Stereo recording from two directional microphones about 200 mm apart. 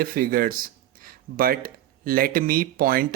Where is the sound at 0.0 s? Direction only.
45° right (ahead or behind).